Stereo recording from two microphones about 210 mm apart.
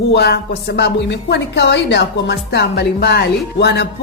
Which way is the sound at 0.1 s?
50° left (ahead or behind).